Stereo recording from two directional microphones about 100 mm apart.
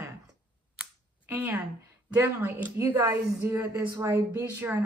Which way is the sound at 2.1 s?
20° right (ahead or behind).